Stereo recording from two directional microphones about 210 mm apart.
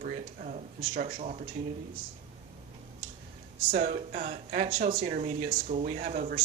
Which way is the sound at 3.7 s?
35° right (ahead or behind).